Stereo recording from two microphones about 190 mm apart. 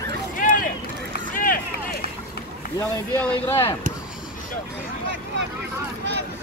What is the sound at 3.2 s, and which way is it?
Speech, 5° left (ahead or behind).